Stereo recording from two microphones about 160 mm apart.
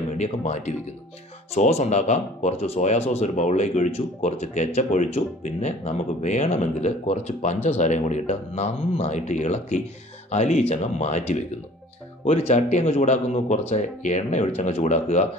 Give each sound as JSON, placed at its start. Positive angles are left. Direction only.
{"t": 0.2, "sound": "speech", "side_deg": 45}